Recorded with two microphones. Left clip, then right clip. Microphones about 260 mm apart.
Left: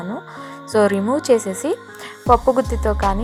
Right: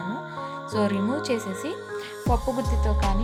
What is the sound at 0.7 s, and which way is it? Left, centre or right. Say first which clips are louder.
A woman's voice: left 10 dB; centre.